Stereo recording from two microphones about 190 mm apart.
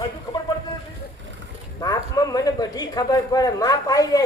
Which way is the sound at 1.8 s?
20° left (ahead or behind).